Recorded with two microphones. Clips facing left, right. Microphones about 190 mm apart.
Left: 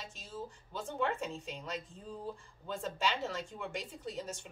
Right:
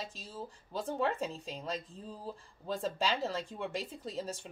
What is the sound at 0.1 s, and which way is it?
A woman's voice, 35° right (ahead or behind).